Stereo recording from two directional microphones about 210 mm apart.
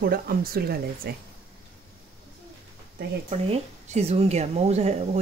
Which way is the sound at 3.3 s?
30° right (ahead or behind).